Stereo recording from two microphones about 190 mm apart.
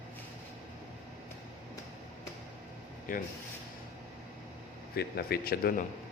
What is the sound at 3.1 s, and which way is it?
Speech, 45° left (ahead or behind).